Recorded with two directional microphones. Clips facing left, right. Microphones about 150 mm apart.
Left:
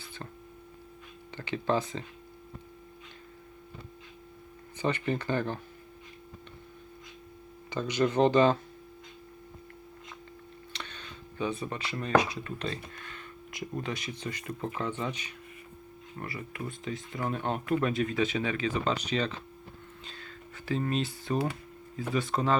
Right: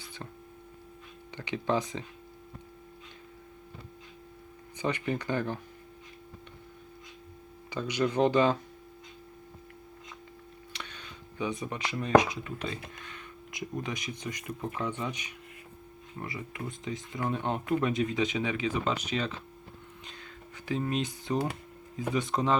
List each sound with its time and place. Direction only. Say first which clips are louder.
1.4 s speech: left 1 dB; 15° right (ahead or behind)
4.8 s speech: left 1 dB; 10° right (ahead or behind)
7.7 s speech: left 2 dB; 10° right (ahead or behind)
10.7 s speech: left 1 dB; 10° right (ahead or behind)